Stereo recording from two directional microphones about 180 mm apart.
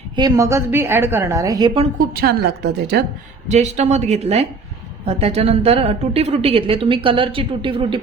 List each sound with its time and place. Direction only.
0.2 s a woman's voice: 20° right (ahead or behind)
2.0 s a woman's voice: 60° right (ahead or behind)
3.5 s a woman's voice: 40° right (ahead or behind)